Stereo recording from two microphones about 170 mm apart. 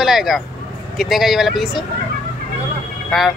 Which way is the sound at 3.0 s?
Centre (ahead or behind).